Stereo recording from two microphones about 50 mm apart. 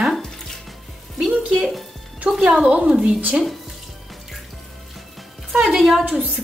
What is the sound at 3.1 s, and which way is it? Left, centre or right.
Speech, right.